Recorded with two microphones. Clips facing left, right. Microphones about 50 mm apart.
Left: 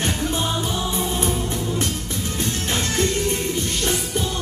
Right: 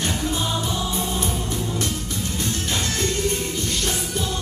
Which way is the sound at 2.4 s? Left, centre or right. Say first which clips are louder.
Left 2 dB; left.